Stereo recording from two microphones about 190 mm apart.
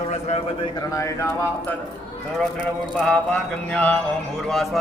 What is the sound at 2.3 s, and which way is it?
Mantra, 5° left (ahead or behind).